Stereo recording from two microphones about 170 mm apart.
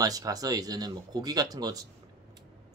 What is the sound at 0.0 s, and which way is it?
Speech, 20° right (ahead or behind).